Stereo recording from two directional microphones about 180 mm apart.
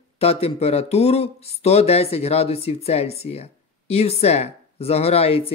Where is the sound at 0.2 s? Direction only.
35° left (ahead or behind).